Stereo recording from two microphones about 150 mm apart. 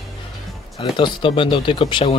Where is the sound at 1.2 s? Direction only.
35° left (ahead or behind).